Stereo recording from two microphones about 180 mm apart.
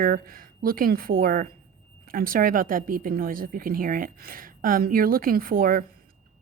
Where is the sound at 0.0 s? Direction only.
55° right (ahead or behind).